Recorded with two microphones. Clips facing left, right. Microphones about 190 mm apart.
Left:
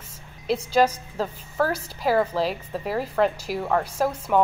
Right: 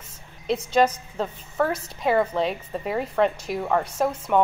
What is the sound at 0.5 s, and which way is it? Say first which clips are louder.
A woman's voice: even; 5° left (ahead or behind).